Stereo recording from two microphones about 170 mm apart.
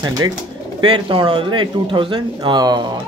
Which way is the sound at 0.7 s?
30° right (ahead or behind).